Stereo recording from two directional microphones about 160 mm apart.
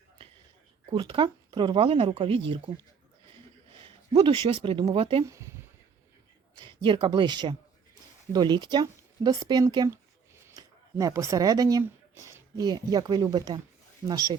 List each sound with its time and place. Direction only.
0.9 s speech: 30° right (ahead or behind)
3.8 s speech: 30° right (ahead or behind)
5.2 s speech: 20° right (ahead or behind)
6.6 s speech: 30° right (ahead or behind)